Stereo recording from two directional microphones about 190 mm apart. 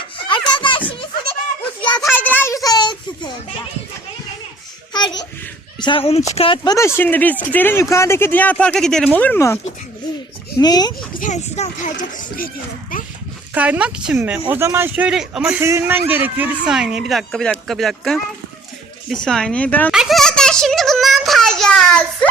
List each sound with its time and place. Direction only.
0.3 s music: 25° left (ahead or behind)
1.8 s a sound: 25° left (ahead or behind)
2.1 s a sound: 10° left (ahead or behind)
4.9 s a sound: 20° left (ahead or behind)
5.8 s speech: 30° left (ahead or behind)
6.7 s speech: 15° left (ahead or behind)
10.6 s speech: 20° left (ahead or behind)
11.1 s speech: 40° left (ahead or behind)
13.5 s a child's voice: 10° right (ahead or behind)